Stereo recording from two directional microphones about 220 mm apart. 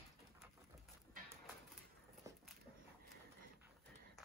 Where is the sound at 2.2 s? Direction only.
15° right (ahead or behind).